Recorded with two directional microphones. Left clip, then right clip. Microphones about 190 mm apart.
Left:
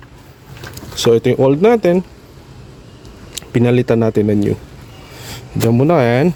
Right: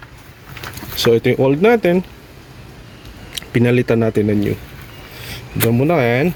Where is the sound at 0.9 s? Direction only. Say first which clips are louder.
Left 2 dB; 5° left (ahead or behind).